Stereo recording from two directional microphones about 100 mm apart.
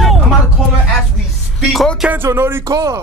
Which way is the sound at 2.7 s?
35° right (ahead or behind).